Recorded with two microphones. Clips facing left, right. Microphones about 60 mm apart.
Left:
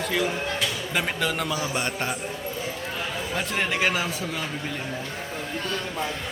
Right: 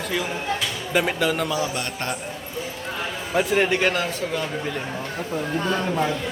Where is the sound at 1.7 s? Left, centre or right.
Centre.